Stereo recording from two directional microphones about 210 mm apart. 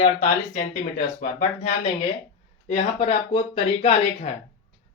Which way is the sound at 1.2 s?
40° left (ahead or behind).